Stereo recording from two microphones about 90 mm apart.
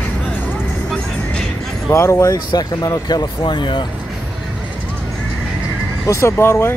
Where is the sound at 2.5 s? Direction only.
45° left (ahead or behind).